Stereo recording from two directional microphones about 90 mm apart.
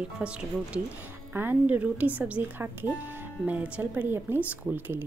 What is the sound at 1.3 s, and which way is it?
Speech, 25° right (ahead or behind).